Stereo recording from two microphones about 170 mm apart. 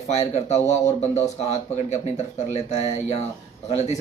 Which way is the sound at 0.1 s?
40° left (ahead or behind).